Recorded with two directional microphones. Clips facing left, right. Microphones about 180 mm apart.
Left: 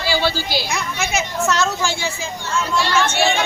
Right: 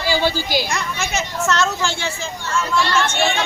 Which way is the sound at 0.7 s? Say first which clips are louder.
Left 1 dB; 10° left (ahead or behind).